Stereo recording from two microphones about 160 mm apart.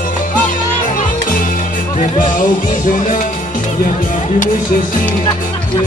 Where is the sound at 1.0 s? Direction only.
55° left (ahead or behind).